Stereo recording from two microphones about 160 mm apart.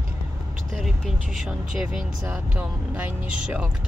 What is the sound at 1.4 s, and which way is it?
Speech, 5° right (ahead or behind).